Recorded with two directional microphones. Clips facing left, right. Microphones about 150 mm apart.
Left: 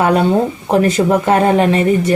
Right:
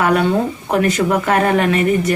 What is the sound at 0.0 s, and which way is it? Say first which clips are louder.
Speech: left 3 dB; 30° left (ahead or behind).